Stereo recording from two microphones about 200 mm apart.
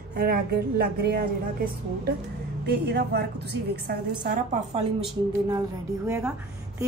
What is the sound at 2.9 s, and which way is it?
Speech, 55° right (ahead or behind).